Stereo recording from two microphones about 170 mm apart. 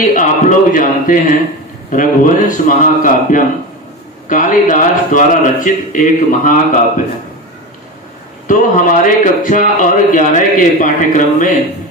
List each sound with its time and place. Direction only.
0.0 s a man's voice: 50° left (ahead or behind)
8.5 s a man's voice: 50° left (ahead or behind)